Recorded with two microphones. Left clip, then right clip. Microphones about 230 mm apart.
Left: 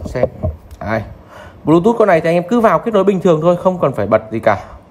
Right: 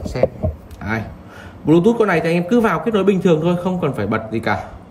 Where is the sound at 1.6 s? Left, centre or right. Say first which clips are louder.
Left 3 dB; left.